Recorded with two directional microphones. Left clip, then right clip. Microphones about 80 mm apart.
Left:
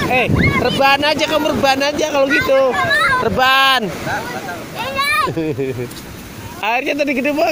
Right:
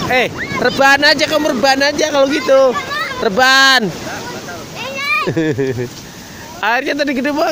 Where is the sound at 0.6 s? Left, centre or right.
Right.